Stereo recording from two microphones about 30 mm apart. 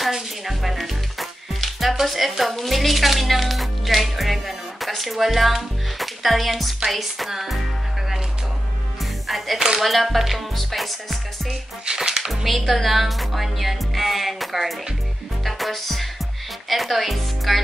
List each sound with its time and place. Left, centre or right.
0.1 s music: centre
2.0 s speech: centre
9.8 s speech: centre
11.8 s speech: right
12.2 s speech: centre
15.4 s music: centre
16.6 s speech: centre